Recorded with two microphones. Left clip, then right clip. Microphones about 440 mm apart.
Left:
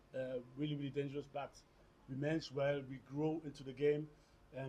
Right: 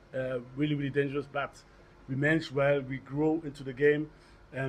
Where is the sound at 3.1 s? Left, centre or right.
Centre.